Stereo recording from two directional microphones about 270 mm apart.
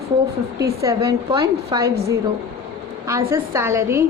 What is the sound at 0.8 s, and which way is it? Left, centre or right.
A woman's voice, centre.